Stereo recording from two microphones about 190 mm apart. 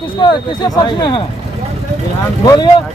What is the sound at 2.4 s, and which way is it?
Speech, 20° left (ahead or behind).